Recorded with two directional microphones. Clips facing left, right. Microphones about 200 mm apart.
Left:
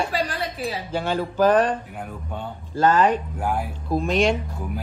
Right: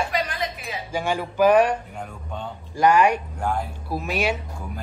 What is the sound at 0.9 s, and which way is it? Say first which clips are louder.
Speech: right 1 dB; 10° right (ahead or behind).